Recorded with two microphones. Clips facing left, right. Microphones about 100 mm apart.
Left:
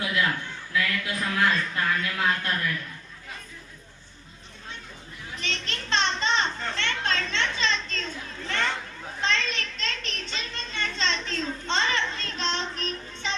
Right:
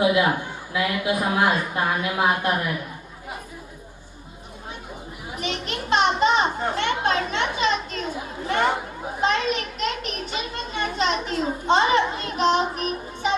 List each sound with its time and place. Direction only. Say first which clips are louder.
0.0 s a woman's voice: right 8 dB; 20° right (ahead or behind)
5.3 s a child's voice: right 6 dB; 15° right (ahead or behind)